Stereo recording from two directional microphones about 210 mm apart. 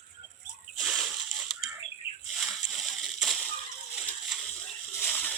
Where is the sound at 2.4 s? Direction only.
Centre (ahead or behind).